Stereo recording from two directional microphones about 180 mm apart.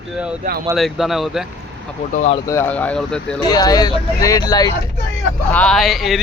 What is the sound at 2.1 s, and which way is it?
Speech, 40° left (ahead or behind).